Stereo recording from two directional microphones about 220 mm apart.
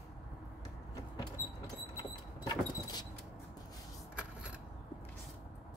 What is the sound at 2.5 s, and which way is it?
Vehicle, 20° left (ahead or behind).